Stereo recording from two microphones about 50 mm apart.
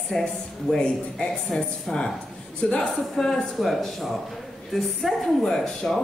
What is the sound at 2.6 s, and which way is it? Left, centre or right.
A man's voice, centre.